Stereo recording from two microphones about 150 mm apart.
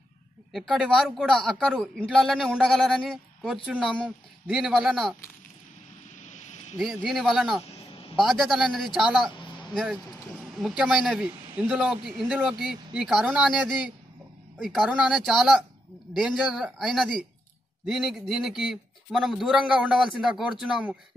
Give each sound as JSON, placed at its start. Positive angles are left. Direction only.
{"t": 0.5, "sound": "a man's voice", "side_deg": 0}
{"t": 6.2, "sound": "a sound", "side_deg": 55}
{"t": 6.8, "sound": "a man's voice", "side_deg": 0}
{"t": 9.8, "sound": "a sound", "side_deg": -5}
{"t": 10.8, "sound": "a man's voice", "side_deg": -5}
{"t": 14.6, "sound": "a man's voice", "side_deg": 0}